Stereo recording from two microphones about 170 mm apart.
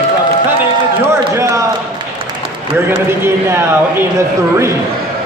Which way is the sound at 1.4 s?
20° right (ahead or behind).